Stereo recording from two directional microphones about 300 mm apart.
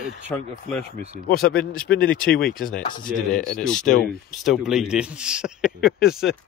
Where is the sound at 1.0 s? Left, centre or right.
Left.